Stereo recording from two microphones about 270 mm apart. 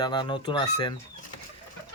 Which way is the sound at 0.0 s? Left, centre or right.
Centre.